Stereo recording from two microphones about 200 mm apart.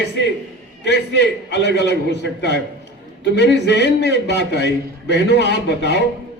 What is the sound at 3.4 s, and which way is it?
A man's voice, 60° left (ahead or behind).